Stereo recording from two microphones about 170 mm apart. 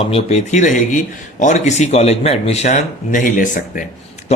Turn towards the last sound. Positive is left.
turn(degrees=50)  # may be behind; listen again after turning